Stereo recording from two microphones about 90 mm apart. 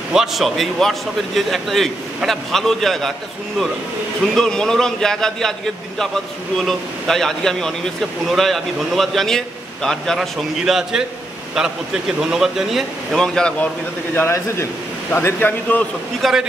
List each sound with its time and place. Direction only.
0.1 s a man's voice: 5° right (ahead or behind)
13.2 s a man's voice: 10° left (ahead or behind)
14.1 s a man's voice: 30° left (ahead or behind)
16.2 s a man's voice: centre (ahead or behind)